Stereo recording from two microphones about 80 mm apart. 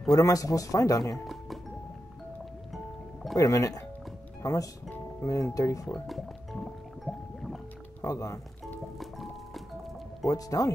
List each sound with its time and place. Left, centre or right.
0.1 s speech: left
1.1 s speech: centre
2.7 s music: centre
3.3 s speech: left
6.0 s music: centre
8.0 s speech: left
9.0 s music: centre
10.2 s speech: left